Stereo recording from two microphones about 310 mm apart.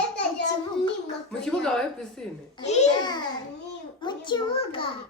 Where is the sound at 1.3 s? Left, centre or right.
Centre.